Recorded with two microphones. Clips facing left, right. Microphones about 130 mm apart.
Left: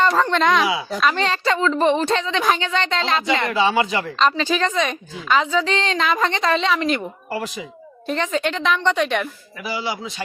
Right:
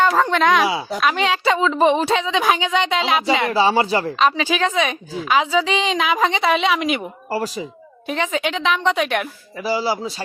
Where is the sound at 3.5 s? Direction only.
35° right (ahead or behind).